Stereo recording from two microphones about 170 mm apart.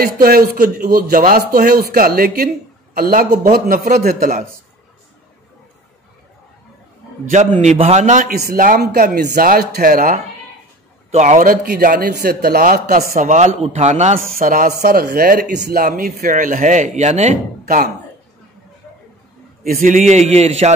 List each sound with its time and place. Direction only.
0.0 s a man's voice: 60° right (ahead or behind)
7.6 s a man's voice: 40° right (ahead or behind); by 10.2 s 55° right (ahead or behind)
11.1 s a man's voice: 45° right (ahead or behind)
14.4 s a man's voice: 55° right (ahead or behind)
19.6 s a man's voice: 55° right (ahead or behind); by 20.7 s 40° right (ahead or behind)